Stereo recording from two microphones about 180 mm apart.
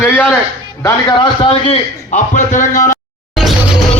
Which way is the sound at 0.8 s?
25° left (ahead or behind).